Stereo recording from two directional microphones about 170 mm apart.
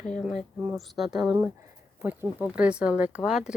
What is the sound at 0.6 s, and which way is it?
Speech, 5° right (ahead or behind).